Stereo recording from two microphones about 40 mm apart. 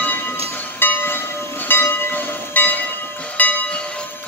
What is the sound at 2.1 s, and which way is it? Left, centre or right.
Train, left.